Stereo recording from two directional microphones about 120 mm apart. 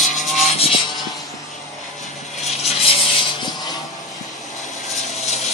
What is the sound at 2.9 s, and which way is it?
Vehicle, 50° left (ahead or behind).